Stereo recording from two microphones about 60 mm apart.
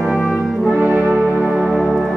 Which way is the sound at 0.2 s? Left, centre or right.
Left.